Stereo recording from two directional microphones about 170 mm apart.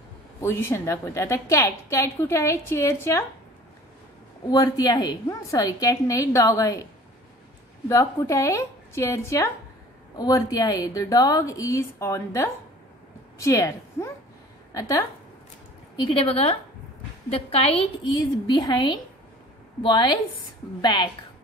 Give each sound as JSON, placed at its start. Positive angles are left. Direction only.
{"t": 0.4, "sound": "a woman's voice", "side_deg": 15}
{"t": 4.5, "sound": "a woman's voice", "side_deg": 25}
{"t": 7.9, "sound": "a woman's voice", "side_deg": 20}
{"t": 16.0, "sound": "a woman's voice", "side_deg": 30}